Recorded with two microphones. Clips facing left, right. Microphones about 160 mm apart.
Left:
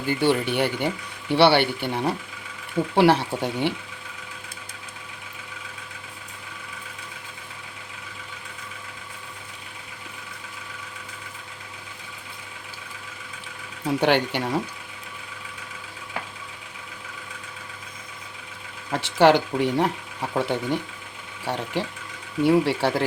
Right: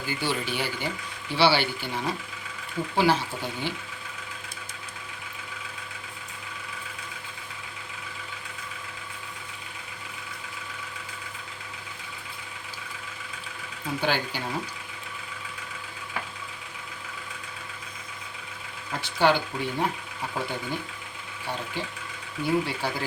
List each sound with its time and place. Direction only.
0.0 s speech: 60° left (ahead or behind)
13.8 s speech: 75° left (ahead or behind)
18.9 s speech: 80° left